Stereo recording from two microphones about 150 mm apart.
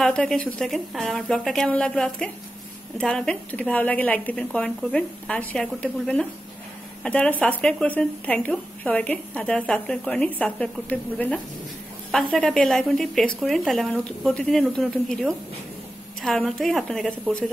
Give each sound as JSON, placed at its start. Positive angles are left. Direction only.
{"t": 0.0, "sound": "speech", "side_deg": 5}